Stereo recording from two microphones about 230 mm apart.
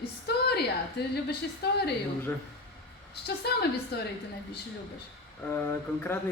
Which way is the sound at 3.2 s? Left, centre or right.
Left.